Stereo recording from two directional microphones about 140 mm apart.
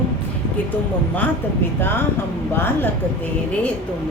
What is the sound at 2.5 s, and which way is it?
Speech, 15° left (ahead or behind).